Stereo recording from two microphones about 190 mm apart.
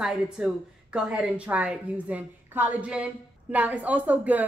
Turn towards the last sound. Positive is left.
turn(degrees=-10)  # may be behind; listen again after turning